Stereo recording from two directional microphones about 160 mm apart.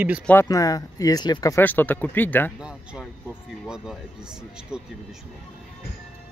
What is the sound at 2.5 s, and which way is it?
Speech, 5° right (ahead or behind).